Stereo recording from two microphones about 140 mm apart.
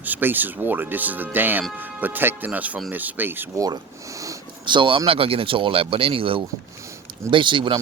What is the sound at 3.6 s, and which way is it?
Speech, 25° right (ahead or behind).